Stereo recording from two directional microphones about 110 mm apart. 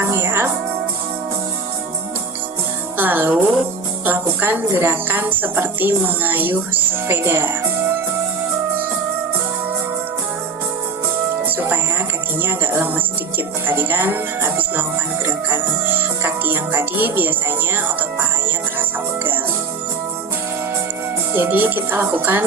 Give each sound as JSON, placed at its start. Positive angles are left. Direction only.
{"t": 0.0, "sound": "music", "side_deg": -20}
{"t": 3.0, "sound": "a woman's voice", "side_deg": -15}
{"t": 11.4, "sound": "music", "side_deg": -15}
{"t": 12.4, "sound": "a woman's voice", "side_deg": -20}
{"t": 21.3, "sound": "speech", "side_deg": -20}